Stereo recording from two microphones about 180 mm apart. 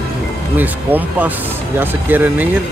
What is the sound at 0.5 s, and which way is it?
Speech, 10° right (ahead or behind).